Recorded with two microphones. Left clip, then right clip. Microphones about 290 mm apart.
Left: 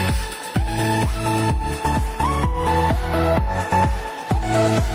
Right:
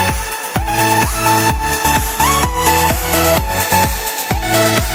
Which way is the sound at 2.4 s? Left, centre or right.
Right.